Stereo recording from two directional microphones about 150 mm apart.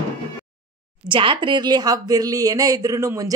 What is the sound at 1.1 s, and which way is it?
A woman's voice, 35° right (ahead or behind).